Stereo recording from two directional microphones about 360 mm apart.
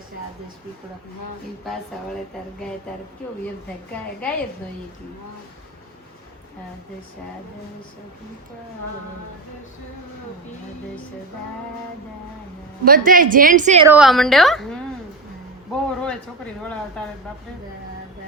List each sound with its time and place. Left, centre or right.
12.8 s a woman's voice: right
13.8 s a woman's voice: centre